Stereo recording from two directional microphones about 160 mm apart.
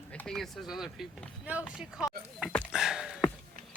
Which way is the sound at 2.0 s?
5° right (ahead or behind).